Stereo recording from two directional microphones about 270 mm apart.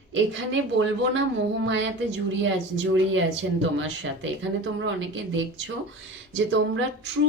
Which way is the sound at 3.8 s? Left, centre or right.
Right.